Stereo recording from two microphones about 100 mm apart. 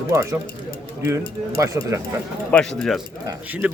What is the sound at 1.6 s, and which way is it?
Speech, 30° right (ahead or behind).